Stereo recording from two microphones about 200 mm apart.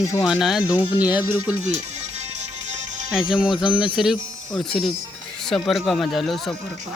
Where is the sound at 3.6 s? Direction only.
5° right (ahead or behind).